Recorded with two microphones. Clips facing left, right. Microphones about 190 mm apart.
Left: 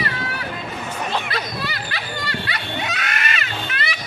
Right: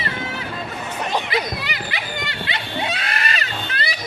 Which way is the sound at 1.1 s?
15° right (ahead or behind).